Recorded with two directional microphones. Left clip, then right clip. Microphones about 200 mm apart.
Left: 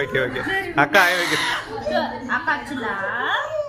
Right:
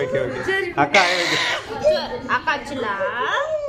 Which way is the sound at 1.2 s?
20° right (ahead or behind).